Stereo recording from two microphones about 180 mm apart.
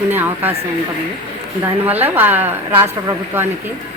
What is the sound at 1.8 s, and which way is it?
A woman's voice, 10° right (ahead or behind).